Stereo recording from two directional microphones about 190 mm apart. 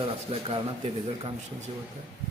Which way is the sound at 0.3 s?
30° right (ahead or behind).